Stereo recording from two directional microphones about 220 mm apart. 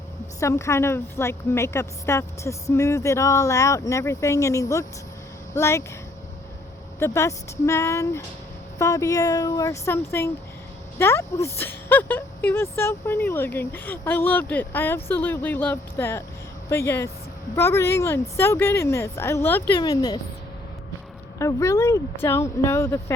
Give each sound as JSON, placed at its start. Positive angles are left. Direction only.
{"t": 0.3, "sound": "speech", "side_deg": 15}
{"t": 7.0, "sound": "speech", "side_deg": 15}
{"t": 21.3, "sound": "speech", "side_deg": 15}